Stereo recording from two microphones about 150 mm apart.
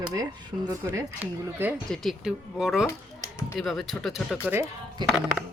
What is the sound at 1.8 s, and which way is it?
Speech, centre (ahead or behind).